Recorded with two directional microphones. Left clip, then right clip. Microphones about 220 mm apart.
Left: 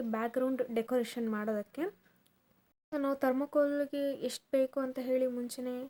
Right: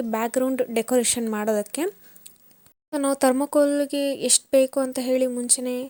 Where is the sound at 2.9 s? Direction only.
35° right (ahead or behind).